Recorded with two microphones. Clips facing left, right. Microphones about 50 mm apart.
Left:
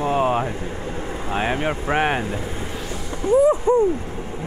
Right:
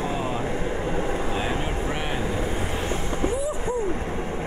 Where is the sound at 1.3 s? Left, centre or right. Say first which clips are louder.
Left 4 dB; left.